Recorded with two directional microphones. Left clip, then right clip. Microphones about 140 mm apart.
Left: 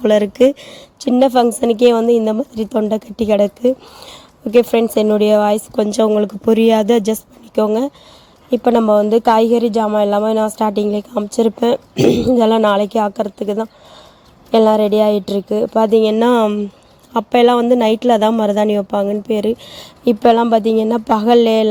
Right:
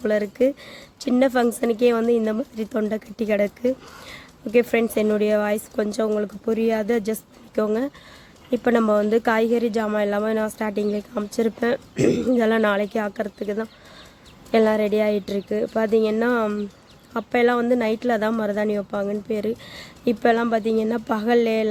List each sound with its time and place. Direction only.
0.0 s speech: 55° left (ahead or behind)
11.1 s speech: 30° left (ahead or behind)
14.5 s speech: 35° left (ahead or behind)
16.0 s speech: 50° left (ahead or behind)